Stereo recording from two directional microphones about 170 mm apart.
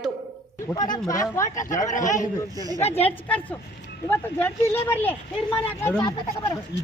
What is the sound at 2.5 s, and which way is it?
Speech, 20° right (ahead or behind).